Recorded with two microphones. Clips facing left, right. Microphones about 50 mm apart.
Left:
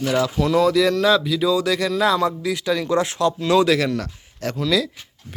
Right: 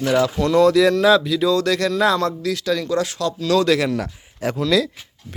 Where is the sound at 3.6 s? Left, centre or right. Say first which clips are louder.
Even; centre.